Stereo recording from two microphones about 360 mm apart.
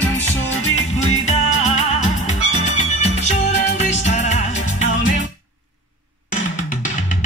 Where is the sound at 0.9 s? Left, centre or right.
Centre.